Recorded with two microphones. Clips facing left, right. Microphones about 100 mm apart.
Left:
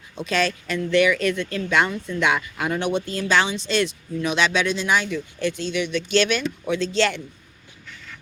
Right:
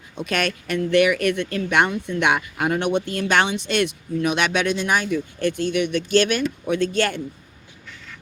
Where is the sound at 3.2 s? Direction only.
55° right (ahead or behind).